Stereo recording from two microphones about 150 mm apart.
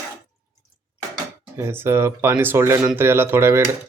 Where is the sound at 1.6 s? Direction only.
15° right (ahead or behind).